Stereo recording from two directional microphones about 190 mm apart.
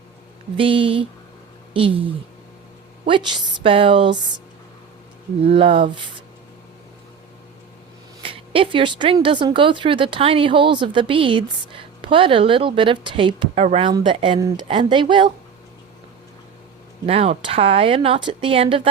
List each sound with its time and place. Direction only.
0.5 s speech: 25° right (ahead or behind)
3.1 s speech: 25° right (ahead or behind)
5.4 s speech: 30° right (ahead or behind)
8.2 s speech: 30° right (ahead or behind)
17.1 s speech: 30° right (ahead or behind)